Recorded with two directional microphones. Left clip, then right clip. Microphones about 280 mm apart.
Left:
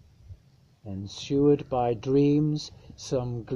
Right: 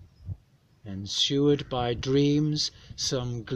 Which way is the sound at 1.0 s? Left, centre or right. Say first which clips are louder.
Even; centre.